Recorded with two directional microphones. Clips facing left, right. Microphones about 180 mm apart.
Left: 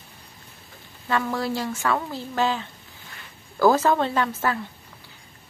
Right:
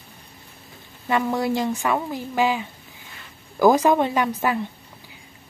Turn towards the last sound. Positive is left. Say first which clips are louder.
# right 2 dB
turn(degrees=-15)  # may be behind; listen again after turning